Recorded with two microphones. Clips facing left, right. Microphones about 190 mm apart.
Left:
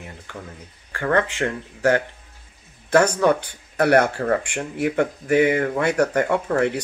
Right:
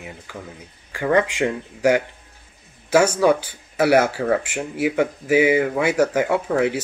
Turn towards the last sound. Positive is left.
turn(degrees=-5)  # may be behind; listen again after turning